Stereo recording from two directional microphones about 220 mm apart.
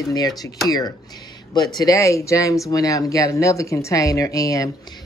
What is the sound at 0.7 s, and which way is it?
Speech, 15° left (ahead or behind).